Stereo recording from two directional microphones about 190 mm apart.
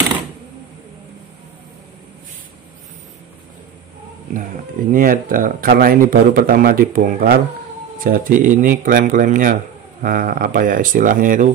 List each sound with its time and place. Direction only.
4.9 s speech: 45° right (ahead or behind)